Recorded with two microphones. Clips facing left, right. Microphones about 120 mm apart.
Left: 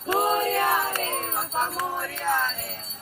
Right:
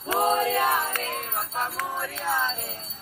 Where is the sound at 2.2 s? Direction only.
10° right (ahead or behind).